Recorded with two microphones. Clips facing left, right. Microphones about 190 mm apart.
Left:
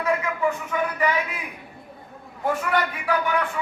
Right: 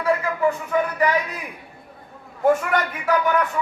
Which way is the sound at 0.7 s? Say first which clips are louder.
Right 3 dB; 35° right (ahead or behind).